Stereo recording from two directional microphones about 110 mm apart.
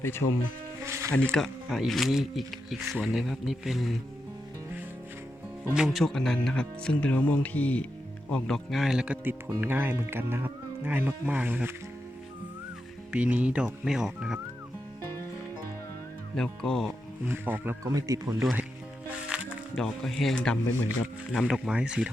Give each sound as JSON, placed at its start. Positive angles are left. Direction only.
{"t": 0.0, "sound": "speech", "side_deg": 20}
{"t": 0.9, "sound": "music", "side_deg": -25}
{"t": 1.1, "sound": "speech", "side_deg": 10}
{"t": 5.7, "sound": "speech", "side_deg": 0}
{"t": 13.1, "sound": "speech", "side_deg": -10}
{"t": 16.3, "sound": "speech", "side_deg": 5}
{"t": 17.2, "sound": "speech", "side_deg": -20}
{"t": 17.8, "sound": "speech", "side_deg": -30}
{"t": 19.0, "sound": "music", "side_deg": -10}
{"t": 19.7, "sound": "speech", "side_deg": 5}